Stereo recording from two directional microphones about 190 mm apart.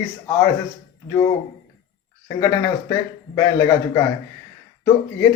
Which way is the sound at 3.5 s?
15° left (ahead or behind).